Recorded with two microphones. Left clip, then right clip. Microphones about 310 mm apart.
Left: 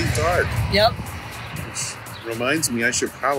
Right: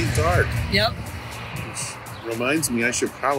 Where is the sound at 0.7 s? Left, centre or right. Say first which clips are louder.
Left 5 dB; centre.